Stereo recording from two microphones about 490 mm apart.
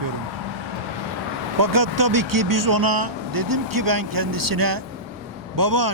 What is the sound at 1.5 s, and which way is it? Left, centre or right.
Speech, right.